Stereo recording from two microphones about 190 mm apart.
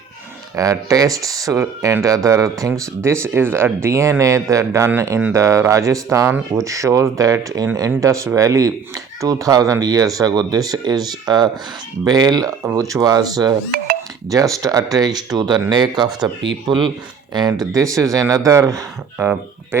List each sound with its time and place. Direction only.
0.5 s speech: 15° right (ahead or behind)